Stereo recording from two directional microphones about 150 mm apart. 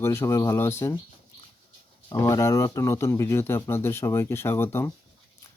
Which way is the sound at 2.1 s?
20° left (ahead or behind).